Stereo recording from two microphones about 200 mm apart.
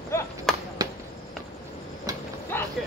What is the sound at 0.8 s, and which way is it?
Basketball bounce, 20° right (ahead or behind).